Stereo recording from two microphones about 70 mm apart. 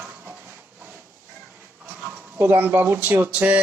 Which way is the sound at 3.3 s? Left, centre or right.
Centre.